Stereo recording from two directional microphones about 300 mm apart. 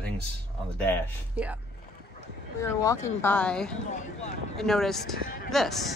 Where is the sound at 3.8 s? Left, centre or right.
Left.